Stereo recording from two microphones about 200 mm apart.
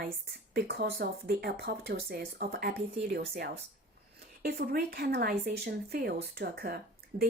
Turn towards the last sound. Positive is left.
turn(degrees=-50)  # may be behind; listen again after turning